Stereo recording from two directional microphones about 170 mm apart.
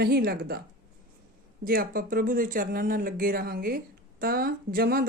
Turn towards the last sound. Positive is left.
turn(degrees=-60)  # may be behind; listen again after turning